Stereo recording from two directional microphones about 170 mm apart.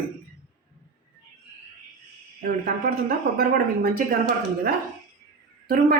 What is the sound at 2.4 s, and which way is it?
A woman's voice, 60° right (ahead or behind).